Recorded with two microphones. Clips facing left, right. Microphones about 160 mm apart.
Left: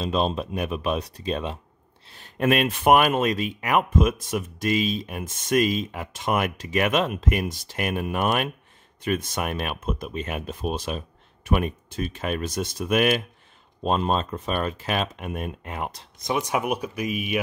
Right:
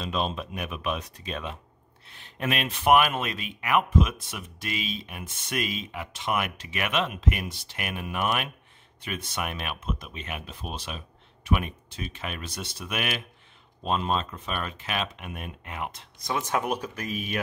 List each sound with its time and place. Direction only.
0.0 s speech: 35° left (ahead or behind)
16.2 s speech: 15° left (ahead or behind)